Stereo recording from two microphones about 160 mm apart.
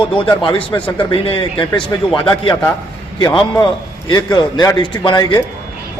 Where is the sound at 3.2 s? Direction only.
25° left (ahead or behind).